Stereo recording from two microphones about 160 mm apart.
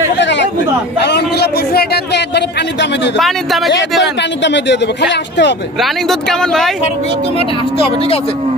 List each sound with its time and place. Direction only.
0.2 s chatter: 90° left
0.9 s a man's voice: 90° left
3.2 s speech: centre (ahead or behind)
4.2 s a man's voice: 90° left
5.8 s speech: centre (ahead or behind)
7.3 s speech: 35° left (ahead or behind)